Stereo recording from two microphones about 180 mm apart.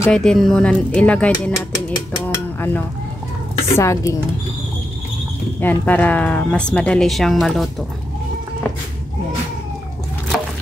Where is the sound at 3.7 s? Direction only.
15° left (ahead or behind).